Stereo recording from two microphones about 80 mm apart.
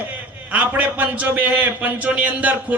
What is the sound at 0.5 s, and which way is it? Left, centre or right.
A man's voice, right.